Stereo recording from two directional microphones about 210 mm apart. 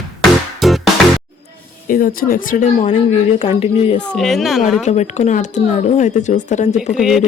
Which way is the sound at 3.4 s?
25° left (ahead or behind).